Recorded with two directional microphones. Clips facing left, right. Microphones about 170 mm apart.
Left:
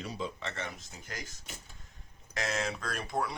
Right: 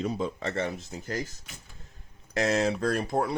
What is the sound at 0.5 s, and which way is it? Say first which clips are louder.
Speech: right 10 dB; 35° right (ahead or behind).